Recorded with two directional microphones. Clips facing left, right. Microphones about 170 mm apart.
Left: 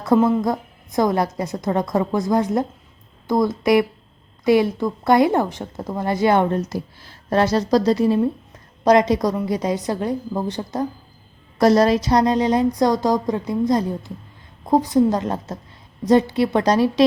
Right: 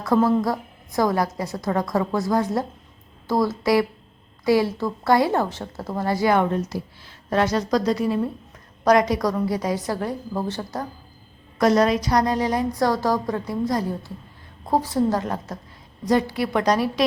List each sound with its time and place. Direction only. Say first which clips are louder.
0.1 s speech: left 2 dB; 20° left (ahead or behind)
6.7 s a woman's voice: left 3 dB; 40° left (ahead or behind); by 10.8 s 20° left (ahead or behind)
11.6 s speech: left 3 dB; 35° left (ahead or behind)